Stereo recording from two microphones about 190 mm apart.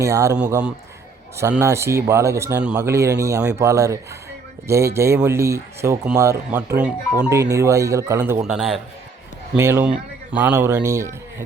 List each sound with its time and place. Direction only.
0.0 s speech: 15° right (ahead or behind)
1.4 s speech: 15° right (ahead or behind); by 8.8 s centre (ahead or behind)
9.6 s speech: 15° right (ahead or behind)